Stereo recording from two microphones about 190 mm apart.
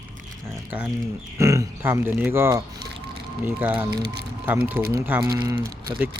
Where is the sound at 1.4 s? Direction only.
15° right (ahead or behind).